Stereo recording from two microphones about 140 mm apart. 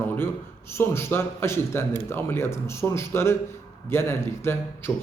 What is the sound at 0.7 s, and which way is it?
A man's voice, 20° left (ahead or behind).